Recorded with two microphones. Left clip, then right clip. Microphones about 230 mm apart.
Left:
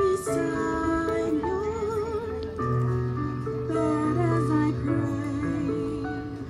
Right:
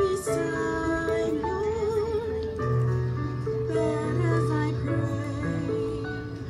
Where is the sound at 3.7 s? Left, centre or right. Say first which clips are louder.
Left 4 dB; left.